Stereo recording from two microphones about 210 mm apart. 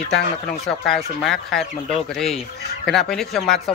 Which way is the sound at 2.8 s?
Centre (ahead or behind).